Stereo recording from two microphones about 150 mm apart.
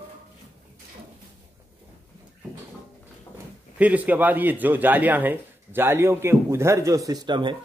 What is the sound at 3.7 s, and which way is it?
A man's voice, 10° right (ahead or behind).